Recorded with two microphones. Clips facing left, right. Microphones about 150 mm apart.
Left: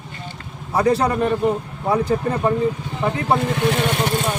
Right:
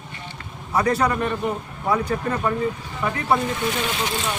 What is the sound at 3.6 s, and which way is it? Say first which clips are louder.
Speech: left 5 dB; 60° left (ahead or behind).